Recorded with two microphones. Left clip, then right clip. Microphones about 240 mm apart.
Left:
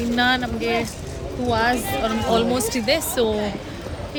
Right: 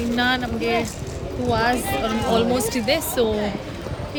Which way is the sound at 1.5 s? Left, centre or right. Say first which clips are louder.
Even; left.